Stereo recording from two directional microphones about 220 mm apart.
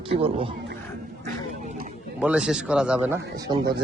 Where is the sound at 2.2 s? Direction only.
5° right (ahead or behind).